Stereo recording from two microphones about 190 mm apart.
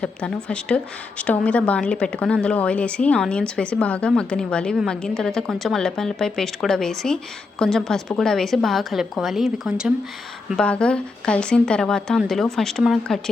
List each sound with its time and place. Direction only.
0.0 s a woman's voice: 5° left (ahead or behind)